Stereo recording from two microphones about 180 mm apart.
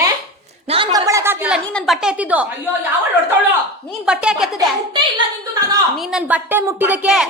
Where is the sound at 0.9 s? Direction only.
15° right (ahead or behind).